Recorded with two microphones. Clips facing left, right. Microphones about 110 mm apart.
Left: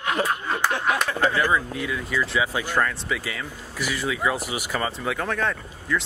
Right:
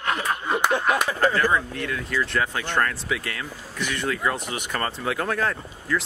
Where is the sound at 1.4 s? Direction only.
5° left (ahead or behind).